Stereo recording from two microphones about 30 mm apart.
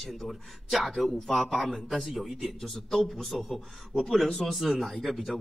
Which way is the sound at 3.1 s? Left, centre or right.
Centre.